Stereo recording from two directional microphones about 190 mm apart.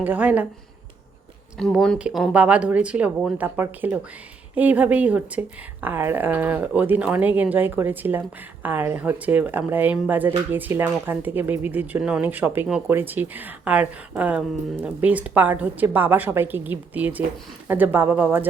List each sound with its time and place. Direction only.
0.0 s speech: 10° right (ahead or behind)
1.7 s speech: centre (ahead or behind)